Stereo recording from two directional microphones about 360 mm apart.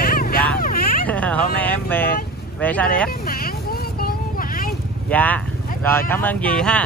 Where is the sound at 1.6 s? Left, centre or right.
Centre.